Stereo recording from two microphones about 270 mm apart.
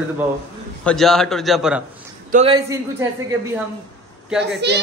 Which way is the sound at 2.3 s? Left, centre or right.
Centre.